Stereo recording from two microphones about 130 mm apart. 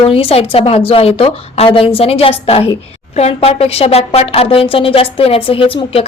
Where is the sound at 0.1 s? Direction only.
45° left (ahead or behind).